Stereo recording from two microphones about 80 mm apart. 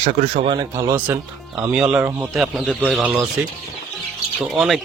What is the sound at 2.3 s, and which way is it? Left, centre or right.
Speech, centre.